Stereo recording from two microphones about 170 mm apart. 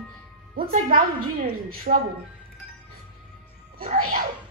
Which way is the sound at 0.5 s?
55° right (ahead or behind).